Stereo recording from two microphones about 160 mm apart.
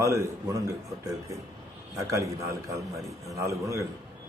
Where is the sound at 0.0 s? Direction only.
20° right (ahead or behind).